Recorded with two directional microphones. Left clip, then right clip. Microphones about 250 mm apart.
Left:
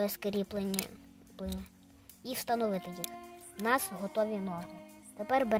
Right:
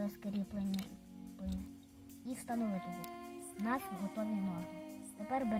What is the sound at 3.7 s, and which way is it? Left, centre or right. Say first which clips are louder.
Speech: left 9 dB; left.